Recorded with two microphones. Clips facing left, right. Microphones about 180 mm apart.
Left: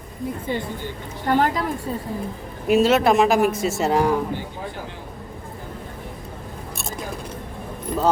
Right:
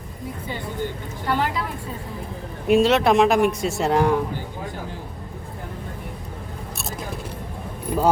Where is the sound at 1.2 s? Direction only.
45° left (ahead or behind).